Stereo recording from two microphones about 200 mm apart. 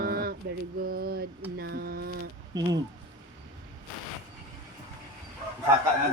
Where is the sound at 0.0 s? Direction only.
50° right (ahead or behind).